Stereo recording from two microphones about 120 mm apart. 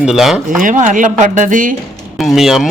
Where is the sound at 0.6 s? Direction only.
90° right.